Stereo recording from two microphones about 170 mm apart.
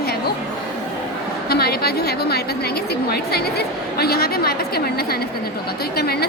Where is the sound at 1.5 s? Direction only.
65° left (ahead or behind).